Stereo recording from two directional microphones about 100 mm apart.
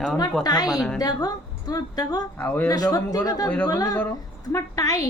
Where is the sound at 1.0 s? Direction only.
40° left (ahead or behind).